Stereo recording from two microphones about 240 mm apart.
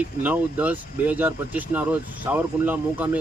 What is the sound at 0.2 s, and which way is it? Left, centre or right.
Speech, centre.